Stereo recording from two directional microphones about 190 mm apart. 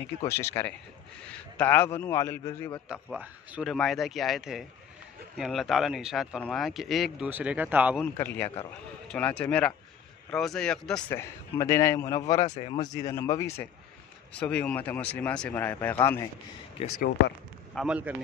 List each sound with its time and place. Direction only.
0.2 s speech: 15° left (ahead or behind)
2.9 s speech: 5° right (ahead or behind)
8.0 s speech: 10° left (ahead or behind)
12.4 s speech: 35° left (ahead or behind)
12.7 s speech: 20° left (ahead or behind)
16.8 s speech: 30° left (ahead or behind)
17.7 s speech: 5° right (ahead or behind)